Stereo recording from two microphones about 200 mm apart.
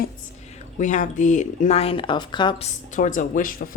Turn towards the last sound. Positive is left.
turn(degrees=45)  # may be behind; listen again after turning